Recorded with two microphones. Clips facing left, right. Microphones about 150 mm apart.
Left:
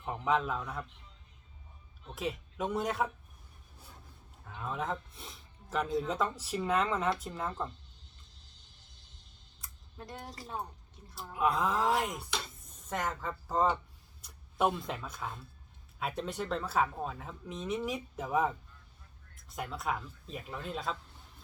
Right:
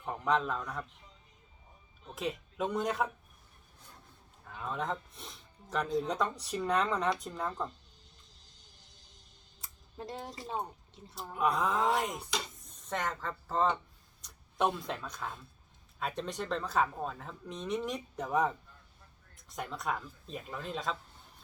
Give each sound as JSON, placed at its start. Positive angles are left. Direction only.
{"t": 0.0, "sound": "a man's voice", "side_deg": 5}
{"t": 2.0, "sound": "speech", "side_deg": 0}
{"t": 4.4, "sound": "speech", "side_deg": 0}
{"t": 9.6, "sound": "a sound", "side_deg": -25}
{"t": 10.5, "sound": "speech", "side_deg": -20}
{"t": 11.1, "sound": "speech", "side_deg": 0}